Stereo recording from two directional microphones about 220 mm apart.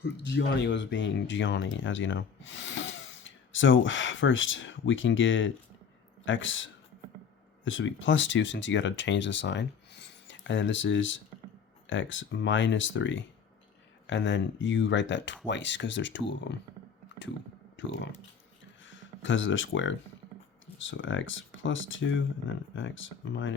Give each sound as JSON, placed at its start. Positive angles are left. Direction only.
{"t": 0.0, "sound": "speech", "side_deg": 55}
{"t": 17.8, "sound": "speech", "side_deg": 55}